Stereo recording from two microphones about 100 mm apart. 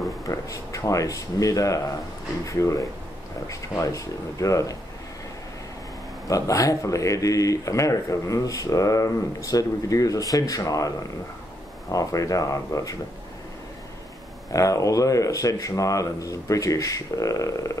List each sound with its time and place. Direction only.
0.3 s speech: 35° left (ahead or behind)
6.2 s speech: 35° left (ahead or behind)
11.9 s speech: 35° left (ahead or behind)
14.5 s speech: 35° left (ahead or behind)